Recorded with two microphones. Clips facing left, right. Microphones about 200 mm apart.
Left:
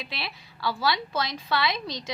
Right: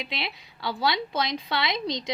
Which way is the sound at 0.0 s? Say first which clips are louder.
Right 3 dB; 20° right (ahead or behind).